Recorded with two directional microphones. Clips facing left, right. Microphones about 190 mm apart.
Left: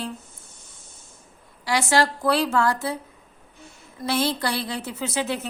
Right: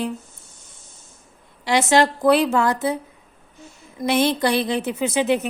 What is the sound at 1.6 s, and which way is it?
A woman's voice, 20° right (ahead or behind).